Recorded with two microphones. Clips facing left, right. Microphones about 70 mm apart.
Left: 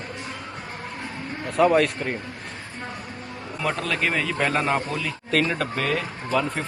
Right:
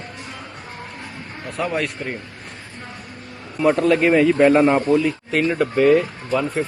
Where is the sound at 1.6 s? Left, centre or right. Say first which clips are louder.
Left 5 dB; centre.